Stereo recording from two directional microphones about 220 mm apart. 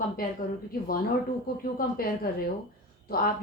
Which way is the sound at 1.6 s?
40° left (ahead or behind).